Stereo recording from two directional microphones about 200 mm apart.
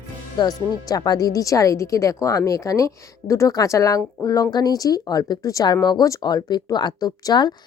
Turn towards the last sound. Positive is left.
turn(degrees=20)  # may be behind; listen again after turning